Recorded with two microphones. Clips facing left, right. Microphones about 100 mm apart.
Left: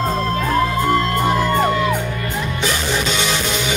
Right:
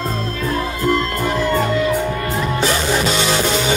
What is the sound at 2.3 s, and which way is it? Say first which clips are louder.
Music: right 3 dB; 35° right (ahead or behind).